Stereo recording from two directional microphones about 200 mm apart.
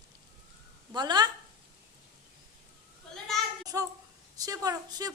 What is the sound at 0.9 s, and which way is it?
Speech, 20° right (ahead or behind).